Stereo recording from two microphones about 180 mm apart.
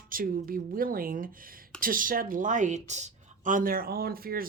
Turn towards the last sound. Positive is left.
turn(degrees=-55)  # may be behind; listen again after turning